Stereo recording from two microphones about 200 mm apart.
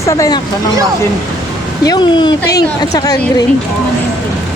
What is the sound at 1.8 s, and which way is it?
A woman's voice, 20° left (ahead or behind).